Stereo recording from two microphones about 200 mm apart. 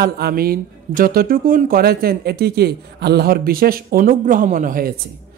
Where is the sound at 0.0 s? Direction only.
50° right (ahead or behind).